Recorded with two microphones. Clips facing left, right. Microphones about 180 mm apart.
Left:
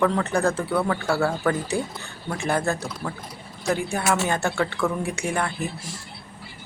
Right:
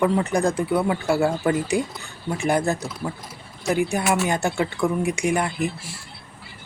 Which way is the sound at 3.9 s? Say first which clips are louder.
Right 2 dB; 15° right (ahead or behind).